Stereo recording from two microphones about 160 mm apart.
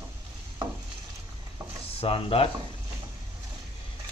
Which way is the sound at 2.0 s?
35° left (ahead or behind).